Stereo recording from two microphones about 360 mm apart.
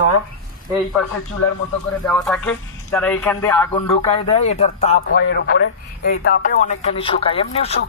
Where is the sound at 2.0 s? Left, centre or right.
Centre.